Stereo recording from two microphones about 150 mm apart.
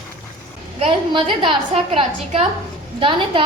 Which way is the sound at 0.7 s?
40° right (ahead or behind).